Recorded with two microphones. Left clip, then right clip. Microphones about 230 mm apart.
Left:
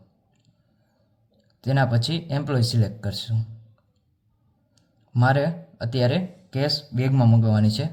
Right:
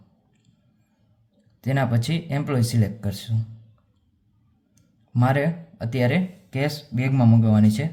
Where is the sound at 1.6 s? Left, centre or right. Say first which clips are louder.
Left 1 dB; right.